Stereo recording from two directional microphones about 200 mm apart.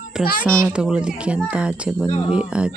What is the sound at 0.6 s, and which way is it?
Speech, 15° right (ahead or behind).